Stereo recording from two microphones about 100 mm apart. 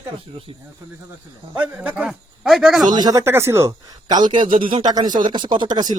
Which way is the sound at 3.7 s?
40° right (ahead or behind).